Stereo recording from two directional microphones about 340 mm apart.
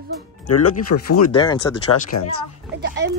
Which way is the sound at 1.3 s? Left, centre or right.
Centre.